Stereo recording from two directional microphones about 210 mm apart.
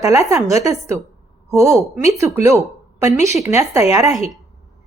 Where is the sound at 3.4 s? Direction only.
15° right (ahead or behind).